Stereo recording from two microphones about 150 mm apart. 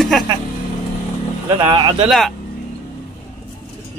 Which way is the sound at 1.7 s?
30° right (ahead or behind).